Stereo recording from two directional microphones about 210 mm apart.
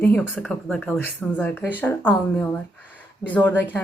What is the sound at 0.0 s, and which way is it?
Speech, 10° left (ahead or behind).